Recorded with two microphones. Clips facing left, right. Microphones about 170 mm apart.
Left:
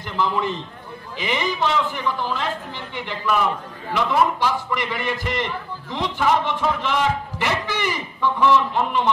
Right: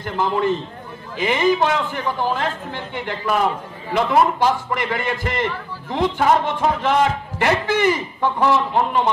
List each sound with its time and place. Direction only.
0.0 s a man's voice: 50° right (ahead or behind)